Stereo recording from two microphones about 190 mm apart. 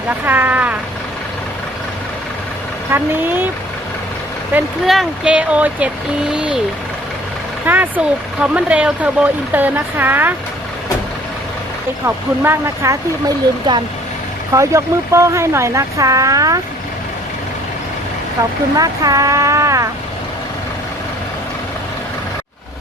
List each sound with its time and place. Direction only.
0.3 s speech: 10° right (ahead or behind)
2.9 s speech: 10° right (ahead or behind)
4.5 s speech: 5° right (ahead or behind)
7.6 s speech: 10° right (ahead or behind)
12.0 s speech: 10° right (ahead or behind)
18.8 s speech: 20° right (ahead or behind)